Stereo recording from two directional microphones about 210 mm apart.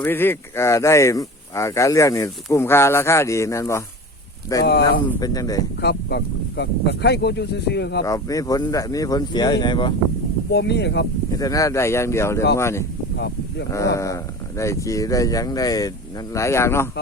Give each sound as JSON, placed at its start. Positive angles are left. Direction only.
{"t": 0.0, "sound": "speech", "side_deg": 10}
{"t": 5.8, "sound": "speech", "side_deg": 50}
{"t": 8.0, "sound": "speech", "side_deg": 15}
{"t": 10.5, "sound": "speech", "side_deg": 55}
{"t": 11.3, "sound": "speech", "side_deg": 15}
{"t": 13.1, "sound": "a sound", "side_deg": 55}
{"t": 13.7, "sound": "speech", "side_deg": 15}